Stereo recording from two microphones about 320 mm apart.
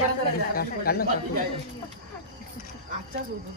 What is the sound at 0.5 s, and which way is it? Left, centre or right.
Speech, left.